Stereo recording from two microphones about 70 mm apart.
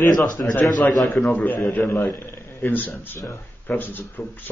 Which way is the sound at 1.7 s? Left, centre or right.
Left.